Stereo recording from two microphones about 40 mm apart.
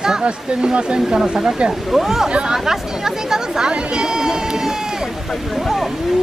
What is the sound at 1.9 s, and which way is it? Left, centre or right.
Speech, centre.